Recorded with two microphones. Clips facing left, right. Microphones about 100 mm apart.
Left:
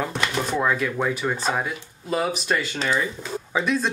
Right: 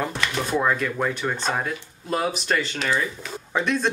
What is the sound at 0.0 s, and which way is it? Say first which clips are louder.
Speech: left 1 dB; centre (ahead or behind).